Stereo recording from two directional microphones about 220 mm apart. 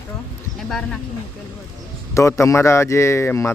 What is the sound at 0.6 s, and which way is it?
Speech, centre (ahead or behind).